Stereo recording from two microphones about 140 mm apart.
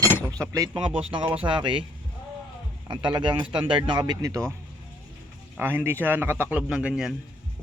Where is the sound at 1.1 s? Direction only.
35° right (ahead or behind).